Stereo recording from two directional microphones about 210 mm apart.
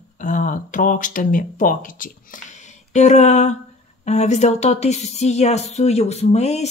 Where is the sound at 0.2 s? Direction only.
40° left (ahead or behind).